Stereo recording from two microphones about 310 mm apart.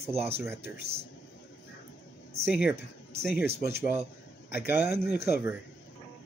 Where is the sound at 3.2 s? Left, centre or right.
Centre.